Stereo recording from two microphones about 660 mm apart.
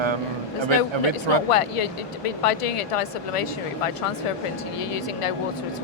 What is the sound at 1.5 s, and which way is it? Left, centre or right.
Speech, left.